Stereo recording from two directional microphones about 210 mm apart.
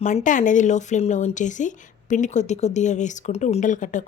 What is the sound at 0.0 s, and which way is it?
Speech, 35° left (ahead or behind).